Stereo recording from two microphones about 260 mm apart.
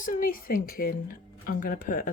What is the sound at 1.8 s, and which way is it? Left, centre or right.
Speech, left.